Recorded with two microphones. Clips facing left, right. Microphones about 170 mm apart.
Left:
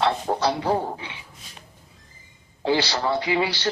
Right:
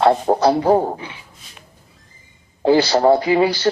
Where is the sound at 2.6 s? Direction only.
45° right (ahead or behind).